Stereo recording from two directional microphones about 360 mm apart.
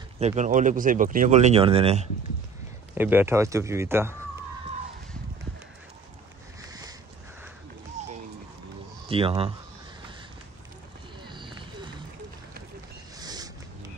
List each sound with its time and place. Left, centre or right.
0.2 s speech: centre
2.9 s speech: centre
6.6 s a sound: centre
9.1 s speech: centre
11.2 s run: centre
13.2 s boat: centre